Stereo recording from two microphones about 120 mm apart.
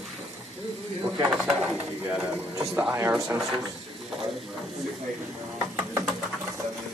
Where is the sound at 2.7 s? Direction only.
15° right (ahead or behind).